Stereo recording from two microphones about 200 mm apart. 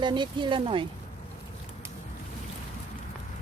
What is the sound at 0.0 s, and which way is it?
Speech, 25° right (ahead or behind).